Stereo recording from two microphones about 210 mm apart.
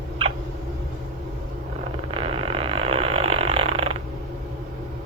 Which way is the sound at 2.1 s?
25° right (ahead or behind).